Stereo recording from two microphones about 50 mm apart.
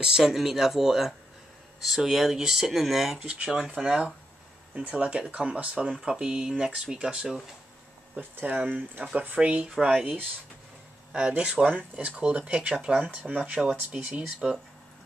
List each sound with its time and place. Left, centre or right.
0.0 s speech: centre
4.7 s speech: right
8.2 s speech: right; by 9.9 s centre
11.1 s speech: centre
11.6 s speech: right
14.4 s speech: centre